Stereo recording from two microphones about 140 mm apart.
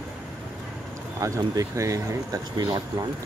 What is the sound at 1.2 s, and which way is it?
Speech, 25° right (ahead or behind).